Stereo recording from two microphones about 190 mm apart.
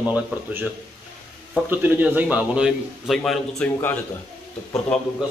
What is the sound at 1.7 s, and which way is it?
Speech, 10° right (ahead or behind).